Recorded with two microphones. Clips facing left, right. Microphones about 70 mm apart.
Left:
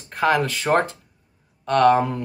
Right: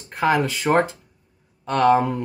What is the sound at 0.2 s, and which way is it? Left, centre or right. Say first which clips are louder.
Speech: even; centre.